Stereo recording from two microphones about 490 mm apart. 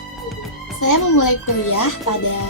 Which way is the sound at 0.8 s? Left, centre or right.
Left.